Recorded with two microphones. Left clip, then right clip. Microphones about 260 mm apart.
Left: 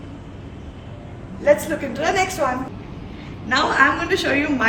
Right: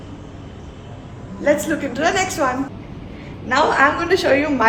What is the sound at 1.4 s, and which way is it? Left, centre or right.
A woman's voice, centre.